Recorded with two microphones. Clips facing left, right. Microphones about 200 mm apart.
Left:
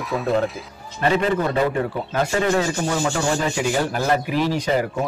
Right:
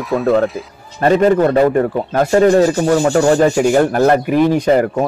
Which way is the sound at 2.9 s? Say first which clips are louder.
Right 11 dB; 55° right (ahead or behind).